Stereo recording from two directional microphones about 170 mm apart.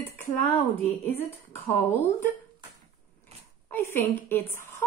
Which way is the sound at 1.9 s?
15° left (ahead or behind).